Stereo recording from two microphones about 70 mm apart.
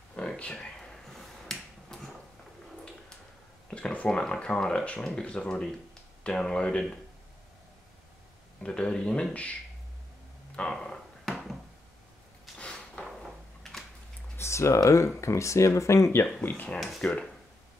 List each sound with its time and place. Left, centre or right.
0.1 s finger snapping: centre
3.7 s speech: centre
8.6 s speech: centre
10.5 s bouncing: centre
12.5 s a sound: centre
14.3 s typing: left
15.1 s speech: left
16.3 s speech: centre
16.8 s speech: centre